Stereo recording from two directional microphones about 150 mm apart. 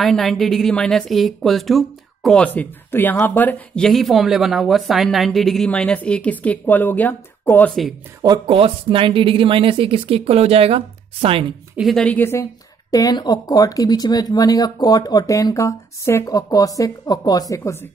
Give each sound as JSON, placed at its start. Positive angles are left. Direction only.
{"t": 0.0, "sound": "a woman's voice", "side_deg": 0}
{"t": 8.2, "sound": "speech", "side_deg": -30}
{"t": 11.7, "sound": "speech", "side_deg": 0}
{"t": 12.9, "sound": "speech", "side_deg": 25}